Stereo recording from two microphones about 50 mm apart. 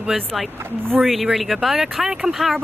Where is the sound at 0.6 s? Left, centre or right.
Right.